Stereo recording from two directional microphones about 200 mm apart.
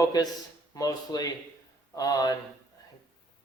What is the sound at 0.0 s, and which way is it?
Speech, 20° left (ahead or behind).